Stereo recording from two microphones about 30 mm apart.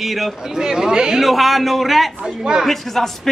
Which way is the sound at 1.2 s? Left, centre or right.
Centre.